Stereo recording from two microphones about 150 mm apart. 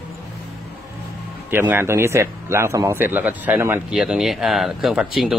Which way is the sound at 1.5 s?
15° right (ahead or behind).